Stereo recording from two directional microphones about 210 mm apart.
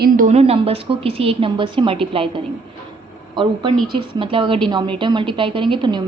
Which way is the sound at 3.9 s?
25° right (ahead or behind).